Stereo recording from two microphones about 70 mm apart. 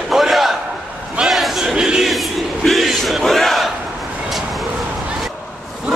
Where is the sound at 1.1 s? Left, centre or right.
Centre.